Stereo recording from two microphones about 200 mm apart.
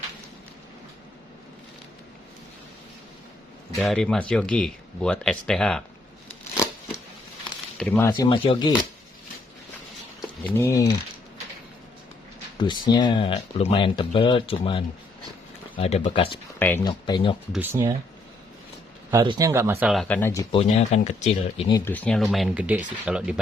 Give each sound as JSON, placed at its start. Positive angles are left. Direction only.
{"t": 3.8, "sound": "speech", "side_deg": 5}
{"t": 6.5, "sound": "a sound", "side_deg": 15}
{"t": 7.8, "sound": "speech", "side_deg": 10}
{"t": 10.2, "sound": "a sound", "side_deg": 15}
{"t": 12.5, "sound": "speech", "side_deg": 20}
{"t": 16.6, "sound": "speech", "side_deg": 10}
{"t": 16.8, "sound": "speech", "side_deg": 20}
{"t": 17.5, "sound": "speech", "side_deg": -10}
{"t": 19.1, "sound": "speech", "side_deg": -20}
{"t": 19.9, "sound": "speech", "side_deg": 5}
{"t": 20.5, "sound": "speech", "side_deg": 30}
{"t": 21.7, "sound": "speech", "side_deg": 15}